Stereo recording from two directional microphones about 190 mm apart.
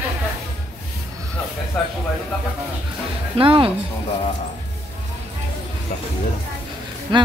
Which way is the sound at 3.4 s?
30° right (ahead or behind).